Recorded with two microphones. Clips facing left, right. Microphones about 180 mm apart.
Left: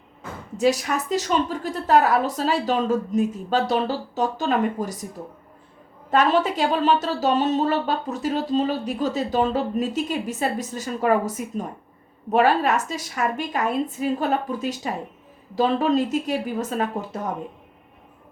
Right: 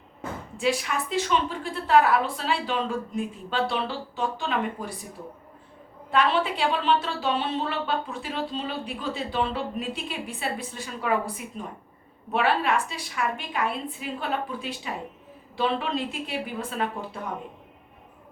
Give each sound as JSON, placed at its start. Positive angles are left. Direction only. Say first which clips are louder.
{"t": 0.5, "sound": "a woman's voice", "louder": "left 6 dB", "side_deg": 40}
{"t": 6.1, "sound": "a woman's voice", "louder": "left 4 dB", "side_deg": 45}